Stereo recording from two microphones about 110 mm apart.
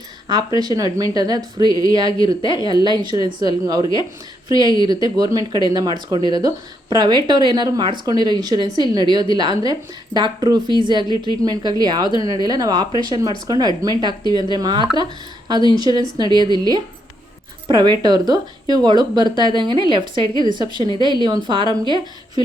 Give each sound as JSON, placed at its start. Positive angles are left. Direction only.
{"t": 0.3, "sound": "a woman's voice", "side_deg": -40}